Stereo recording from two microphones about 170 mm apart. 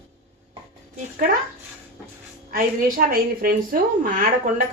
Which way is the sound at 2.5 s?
60° right (ahead or behind).